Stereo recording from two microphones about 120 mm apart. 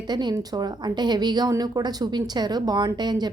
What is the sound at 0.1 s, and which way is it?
A woman's voice, 35° right (ahead or behind).